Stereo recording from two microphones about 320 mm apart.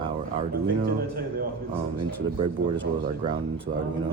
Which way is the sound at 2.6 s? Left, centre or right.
Right.